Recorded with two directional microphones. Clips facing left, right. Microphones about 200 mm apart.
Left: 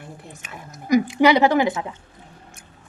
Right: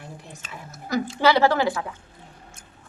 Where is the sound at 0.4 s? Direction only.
15° left (ahead or behind).